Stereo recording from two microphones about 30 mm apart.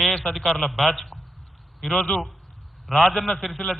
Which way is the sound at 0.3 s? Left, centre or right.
Centre.